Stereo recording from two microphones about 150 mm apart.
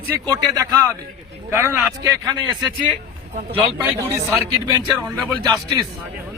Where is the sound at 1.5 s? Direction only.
15° right (ahead or behind).